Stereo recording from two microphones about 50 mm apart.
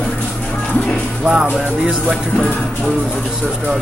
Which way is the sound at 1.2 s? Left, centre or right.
Centre.